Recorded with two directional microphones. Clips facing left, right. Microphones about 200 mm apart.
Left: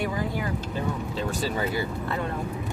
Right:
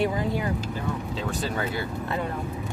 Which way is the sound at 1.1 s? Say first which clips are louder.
Left 2 dB; 5° left (ahead or behind).